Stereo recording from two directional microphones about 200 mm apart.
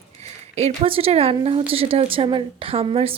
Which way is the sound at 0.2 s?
30° right (ahead or behind).